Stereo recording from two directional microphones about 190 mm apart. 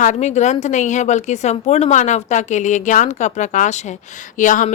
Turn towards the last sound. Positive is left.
turn(degrees=45)  # may be behind; listen again after turning